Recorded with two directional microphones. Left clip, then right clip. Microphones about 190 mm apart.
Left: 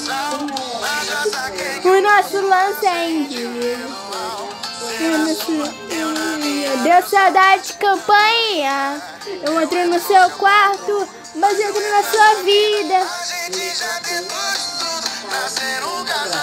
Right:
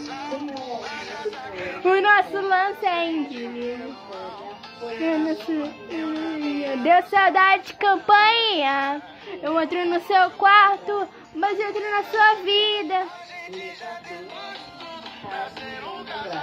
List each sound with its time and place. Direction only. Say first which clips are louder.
0.1 s music: left 9 dB; 50° left (ahead or behind)
1.8 s a child's voice: left 4 dB; 5° right (ahead or behind)
5.0 s music: left 5 dB; 55° left (ahead or behind)
6.8 s a child's voice: left 4 dB; 10° right (ahead or behind)
13.6 s music: left 11 dB; 45° left (ahead or behind)